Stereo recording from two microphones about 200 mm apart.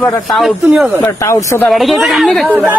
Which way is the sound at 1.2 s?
15° left (ahead or behind).